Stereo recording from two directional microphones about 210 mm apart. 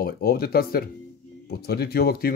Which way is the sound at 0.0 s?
45° left (ahead or behind).